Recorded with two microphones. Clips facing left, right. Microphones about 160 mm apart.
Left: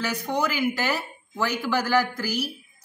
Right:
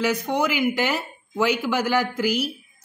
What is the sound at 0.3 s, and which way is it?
A woman's voice, 15° right (ahead or behind).